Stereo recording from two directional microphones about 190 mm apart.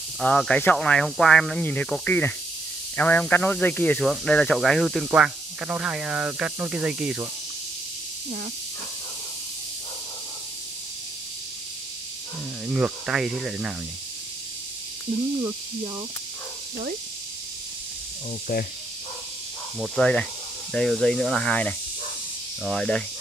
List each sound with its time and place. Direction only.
0.2 s speech: 5° left (ahead or behind)
12.6 s speech: 5° right (ahead or behind)
18.5 s speech: 55° left (ahead or behind)
19.8 s speech: 5° left (ahead or behind)